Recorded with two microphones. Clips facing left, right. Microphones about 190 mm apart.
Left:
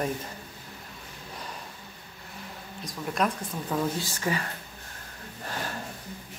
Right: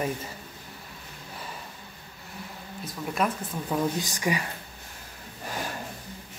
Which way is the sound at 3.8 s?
15° right (ahead or behind).